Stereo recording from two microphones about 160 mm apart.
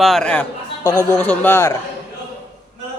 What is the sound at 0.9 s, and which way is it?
Speech, 15° left (ahead or behind).